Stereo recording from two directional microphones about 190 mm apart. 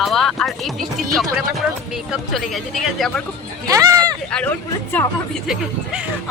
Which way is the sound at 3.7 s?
20° right (ahead or behind).